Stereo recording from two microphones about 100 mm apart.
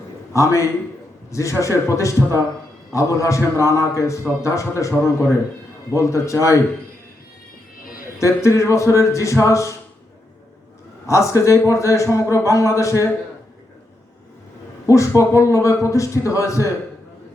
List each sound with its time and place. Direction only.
0.3 s a man's voice: 30° left (ahead or behind)
8.2 s a man's voice: 30° left (ahead or behind)
11.0 s a man's voice: 30° left (ahead or behind)
14.8 s a man's voice: 30° left (ahead or behind)